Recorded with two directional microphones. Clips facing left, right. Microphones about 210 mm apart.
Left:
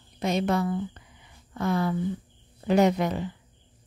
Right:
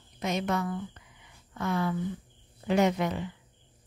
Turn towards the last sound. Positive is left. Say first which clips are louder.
# left 3 dB
turn(degrees=40)  # may be behind; listen again after turning